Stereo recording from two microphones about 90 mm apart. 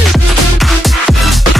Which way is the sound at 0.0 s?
Centre (ahead or behind).